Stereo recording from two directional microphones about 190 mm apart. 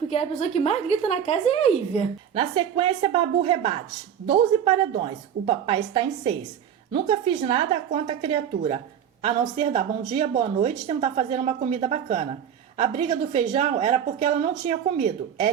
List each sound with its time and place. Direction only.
0.1 s a woman's voice: 35° left (ahead or behind)
2.3 s a woman's voice: 25° right (ahead or behind)